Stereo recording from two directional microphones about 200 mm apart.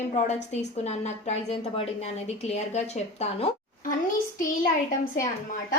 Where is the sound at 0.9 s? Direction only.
35° left (ahead or behind).